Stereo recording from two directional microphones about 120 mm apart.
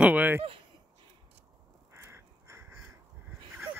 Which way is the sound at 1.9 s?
20° right (ahead or behind).